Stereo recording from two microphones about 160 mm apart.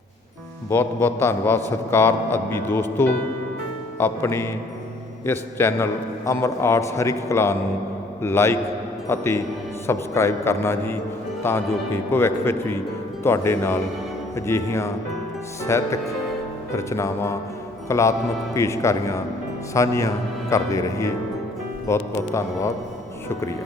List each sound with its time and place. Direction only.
0.7 s a man's voice: 10° left (ahead or behind)